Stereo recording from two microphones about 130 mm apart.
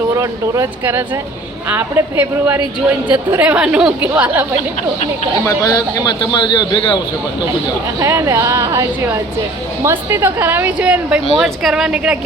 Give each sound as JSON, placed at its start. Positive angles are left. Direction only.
{"t": 0.2, "sound": "a woman's voice", "side_deg": -25}
{"t": 5.5, "sound": "a man's voice", "side_deg": 30}
{"t": 7.9, "sound": "a woman's voice", "side_deg": -20}